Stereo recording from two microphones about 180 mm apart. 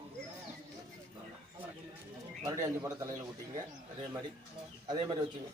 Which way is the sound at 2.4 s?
20° right (ahead or behind).